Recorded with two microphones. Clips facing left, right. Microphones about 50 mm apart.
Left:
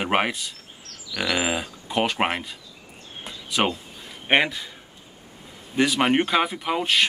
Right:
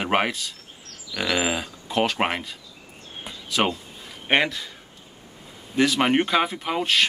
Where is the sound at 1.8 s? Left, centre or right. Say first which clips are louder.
Right 1 dB; centre.